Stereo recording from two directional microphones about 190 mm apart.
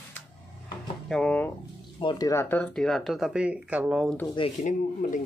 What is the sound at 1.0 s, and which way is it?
Speech, 5° left (ahead or behind).